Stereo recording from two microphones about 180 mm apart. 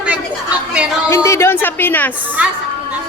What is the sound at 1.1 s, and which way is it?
A woman's voice, 15° left (ahead or behind).